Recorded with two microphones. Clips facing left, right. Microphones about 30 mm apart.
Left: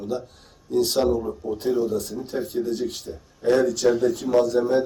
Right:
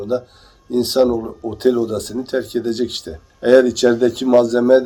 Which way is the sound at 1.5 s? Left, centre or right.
Right.